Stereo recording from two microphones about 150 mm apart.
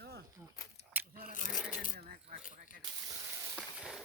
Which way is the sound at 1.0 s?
10° right (ahead or behind).